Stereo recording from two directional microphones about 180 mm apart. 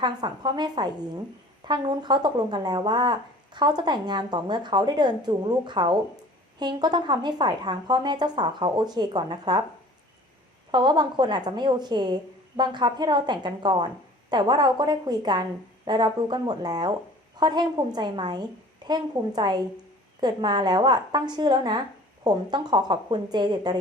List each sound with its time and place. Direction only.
0.0 s a woman's voice: 25° right (ahead or behind)
10.7 s a woman's voice: 25° right (ahead or behind)